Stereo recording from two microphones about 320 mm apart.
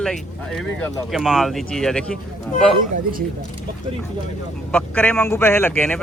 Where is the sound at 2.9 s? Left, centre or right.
Right.